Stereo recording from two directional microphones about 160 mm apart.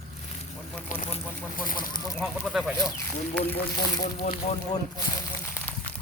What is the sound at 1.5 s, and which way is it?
Speech, 60° left (ahead or behind).